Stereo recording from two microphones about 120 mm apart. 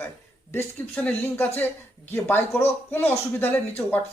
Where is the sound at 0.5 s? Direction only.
15° left (ahead or behind).